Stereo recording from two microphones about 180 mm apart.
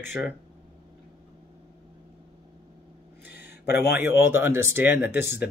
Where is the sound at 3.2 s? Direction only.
65° left (ahead or behind).